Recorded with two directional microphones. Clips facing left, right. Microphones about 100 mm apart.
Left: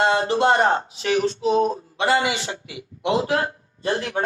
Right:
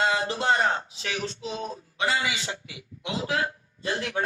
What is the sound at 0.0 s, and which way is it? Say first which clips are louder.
Speech: left 7 dB; 60° left (ahead or behind).